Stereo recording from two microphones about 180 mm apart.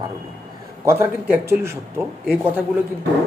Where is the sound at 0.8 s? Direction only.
10° right (ahead or behind).